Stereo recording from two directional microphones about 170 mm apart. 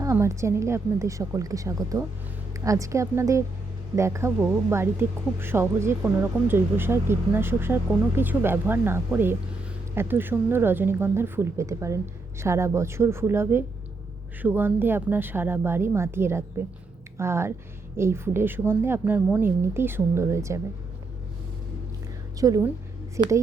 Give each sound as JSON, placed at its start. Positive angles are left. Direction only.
{"t": 0.0, "sound": "a woman's voice", "side_deg": -15}
{"t": 22.4, "sound": "a woman's voice", "side_deg": -20}